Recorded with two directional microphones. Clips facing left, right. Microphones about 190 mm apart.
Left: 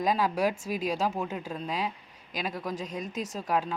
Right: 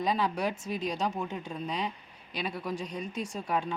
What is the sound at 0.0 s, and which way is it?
Speech, 10° left (ahead or behind).